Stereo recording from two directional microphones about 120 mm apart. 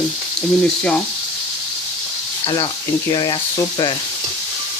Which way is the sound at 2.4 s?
45° left (ahead or behind).